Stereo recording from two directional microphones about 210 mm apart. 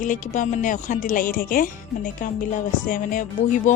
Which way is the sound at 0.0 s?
35° left (ahead or behind).